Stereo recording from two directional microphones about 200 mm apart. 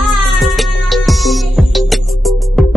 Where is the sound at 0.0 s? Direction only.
Centre (ahead or behind).